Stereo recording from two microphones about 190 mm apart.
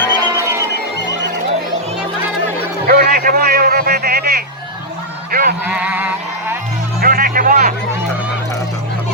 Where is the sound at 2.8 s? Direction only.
50° right (ahead or behind).